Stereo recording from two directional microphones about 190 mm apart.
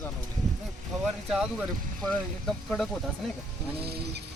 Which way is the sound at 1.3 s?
Centre (ahead or behind).